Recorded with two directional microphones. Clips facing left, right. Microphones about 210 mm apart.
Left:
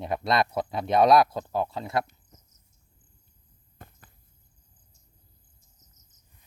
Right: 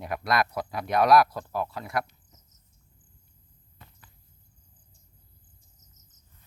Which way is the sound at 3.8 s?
50° left (ahead or behind).